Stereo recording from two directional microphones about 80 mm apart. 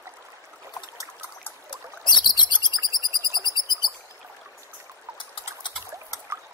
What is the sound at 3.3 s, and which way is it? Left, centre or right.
Bird, right.